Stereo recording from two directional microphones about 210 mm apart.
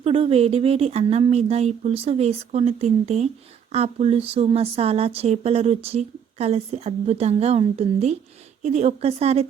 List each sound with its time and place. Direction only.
0.0 s speech: 25° right (ahead or behind)